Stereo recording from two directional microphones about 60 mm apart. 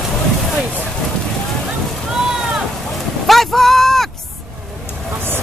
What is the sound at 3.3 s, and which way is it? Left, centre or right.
Speech, centre.